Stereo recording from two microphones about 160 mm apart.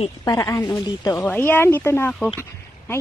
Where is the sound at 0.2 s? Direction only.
20° left (ahead or behind).